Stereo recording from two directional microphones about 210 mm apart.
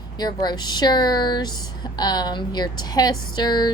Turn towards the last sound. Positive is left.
turn(degrees=20)  # may be behind; listen again after turning